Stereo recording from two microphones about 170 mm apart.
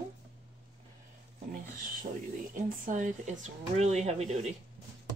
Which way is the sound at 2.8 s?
45° right (ahead or behind).